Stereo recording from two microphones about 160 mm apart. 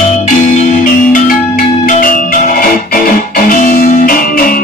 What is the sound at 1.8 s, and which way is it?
Music, 55° left (ahead or behind).